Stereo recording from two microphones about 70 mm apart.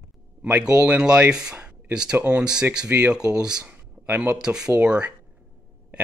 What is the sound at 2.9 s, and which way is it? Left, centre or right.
Speech, right.